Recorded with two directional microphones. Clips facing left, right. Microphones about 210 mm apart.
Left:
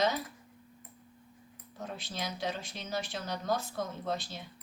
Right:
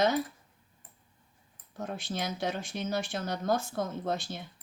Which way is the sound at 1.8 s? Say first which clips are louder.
Right 4 dB; 50° right (ahead or behind).